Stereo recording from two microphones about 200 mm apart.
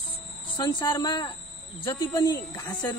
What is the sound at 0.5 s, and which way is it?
Speech, 20° left (ahead or behind).